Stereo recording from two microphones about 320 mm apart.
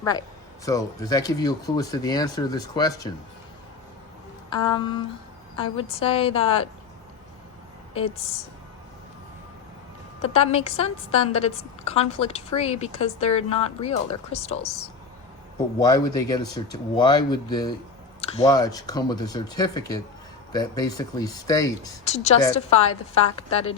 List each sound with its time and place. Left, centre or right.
0.0 s speech: centre
4.4 s speech: centre
7.9 s speech: centre
10.2 s a woman's voice: centre